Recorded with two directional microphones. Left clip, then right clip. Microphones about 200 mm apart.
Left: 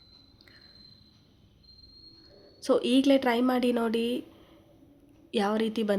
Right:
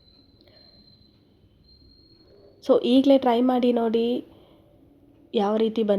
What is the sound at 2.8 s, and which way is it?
Speech, 40° left (ahead or behind).